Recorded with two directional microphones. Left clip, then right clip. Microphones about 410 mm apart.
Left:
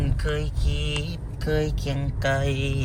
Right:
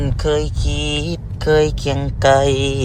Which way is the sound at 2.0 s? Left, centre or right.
Centre.